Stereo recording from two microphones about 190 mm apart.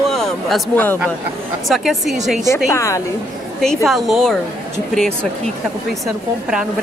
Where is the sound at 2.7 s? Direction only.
15° left (ahead or behind).